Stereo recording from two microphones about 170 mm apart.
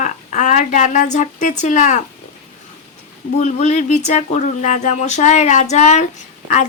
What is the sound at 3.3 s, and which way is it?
Speech, 45° left (ahead or behind).